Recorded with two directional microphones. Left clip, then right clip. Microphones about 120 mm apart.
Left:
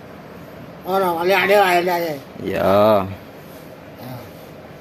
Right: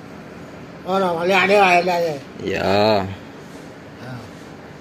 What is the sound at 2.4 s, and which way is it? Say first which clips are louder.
Speech: left 3 dB; 35° left (ahead or behind).